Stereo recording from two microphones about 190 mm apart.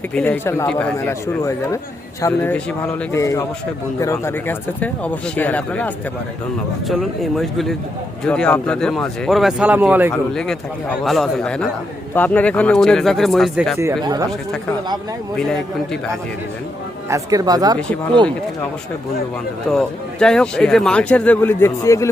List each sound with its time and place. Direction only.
0.1 s speech: 10° left (ahead or behind); by 10.1 s 10° right (ahead or behind)
10.3 s speech: 5° left (ahead or behind)
13.7 s speech: 15° right (ahead or behind)
17.1 s speech: 20° right (ahead or behind)
19.7 s speech: 5° left (ahead or behind)